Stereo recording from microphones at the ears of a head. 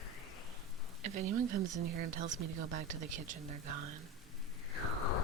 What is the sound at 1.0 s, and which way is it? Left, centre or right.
Speech, right.